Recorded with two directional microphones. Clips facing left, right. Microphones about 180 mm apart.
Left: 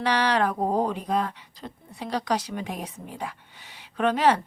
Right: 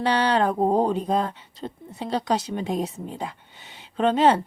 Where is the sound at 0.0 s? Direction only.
30° right (ahead or behind).